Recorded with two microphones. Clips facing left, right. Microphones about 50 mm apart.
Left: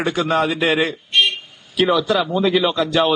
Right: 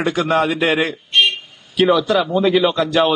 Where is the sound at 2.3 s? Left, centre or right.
Centre.